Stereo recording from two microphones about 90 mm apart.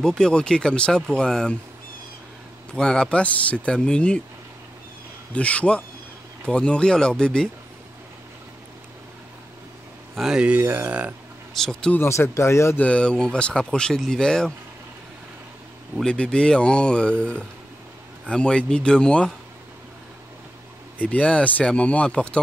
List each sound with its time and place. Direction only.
0.2 s speech: 10° left (ahead or behind)
2.7 s speech: 10° left (ahead or behind)
5.3 s speech: 15° left (ahead or behind)
10.1 s speech: 5° right (ahead or behind)
11.5 s speech: 5° left (ahead or behind)
12.0 s speech: 30° left (ahead or behind)
12.8 s speech: 10° left (ahead or behind)
16.0 s speech: 10° left (ahead or behind)
21.0 s speech: 15° left (ahead or behind)